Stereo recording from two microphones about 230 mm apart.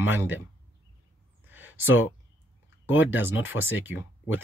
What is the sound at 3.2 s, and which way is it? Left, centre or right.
Speech, centre.